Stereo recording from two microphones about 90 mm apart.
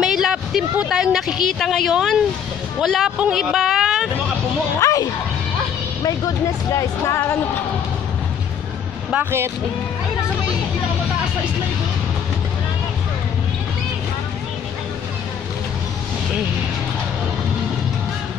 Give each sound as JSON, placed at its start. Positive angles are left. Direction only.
{"t": 0.0, "sound": "speech", "side_deg": -5}
{"t": 4.7, "sound": "speech", "side_deg": 40}
{"t": 9.1, "sound": "speech", "side_deg": -25}